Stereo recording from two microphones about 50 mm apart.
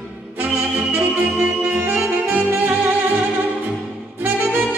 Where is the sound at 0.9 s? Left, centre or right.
Right.